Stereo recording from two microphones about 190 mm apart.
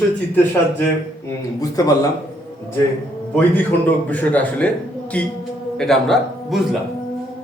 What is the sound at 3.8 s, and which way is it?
A man's voice, 10° left (ahead or behind).